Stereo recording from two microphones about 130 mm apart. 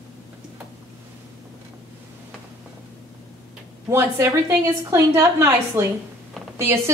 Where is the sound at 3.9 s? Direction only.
20° right (ahead or behind).